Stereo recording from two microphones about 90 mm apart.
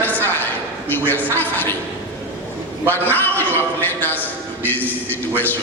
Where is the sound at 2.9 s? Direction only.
20° left (ahead or behind).